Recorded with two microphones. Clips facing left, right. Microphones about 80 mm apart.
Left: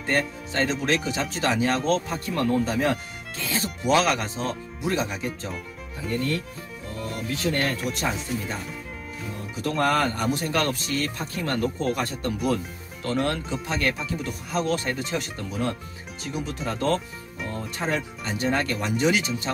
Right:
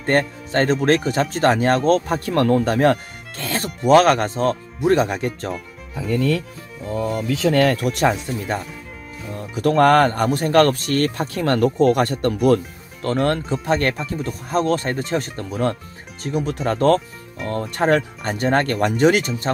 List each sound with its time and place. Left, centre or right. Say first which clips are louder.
0.0 s speech: right 6 dB; right
7.5 s speech: right 9 dB; right
9.6 s speech: right 9 dB; right
13.0 s speech: right 6 dB; right